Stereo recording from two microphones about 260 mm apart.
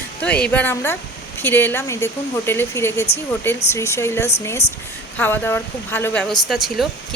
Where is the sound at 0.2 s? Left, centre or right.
Centre.